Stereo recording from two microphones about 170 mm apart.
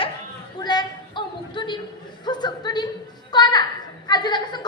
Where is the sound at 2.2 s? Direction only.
25° left (ahead or behind).